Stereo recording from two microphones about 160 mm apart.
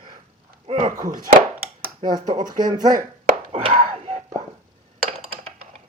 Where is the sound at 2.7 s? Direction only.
25° right (ahead or behind).